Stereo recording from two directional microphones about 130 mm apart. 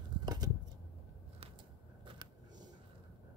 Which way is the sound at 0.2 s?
30° right (ahead or behind).